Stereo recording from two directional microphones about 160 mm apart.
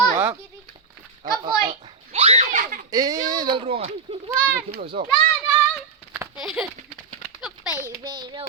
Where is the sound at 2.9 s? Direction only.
25° right (ahead or behind).